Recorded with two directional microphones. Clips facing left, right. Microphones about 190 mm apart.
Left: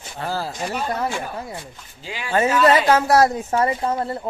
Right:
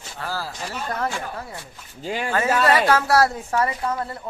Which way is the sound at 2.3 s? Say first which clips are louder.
Left 4 dB; 20° left (ahead or behind).